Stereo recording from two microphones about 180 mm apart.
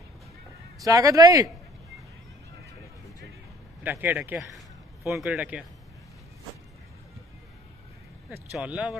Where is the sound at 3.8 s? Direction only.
10° right (ahead or behind).